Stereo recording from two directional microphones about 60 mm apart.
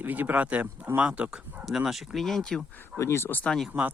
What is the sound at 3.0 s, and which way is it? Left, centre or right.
Speech, left.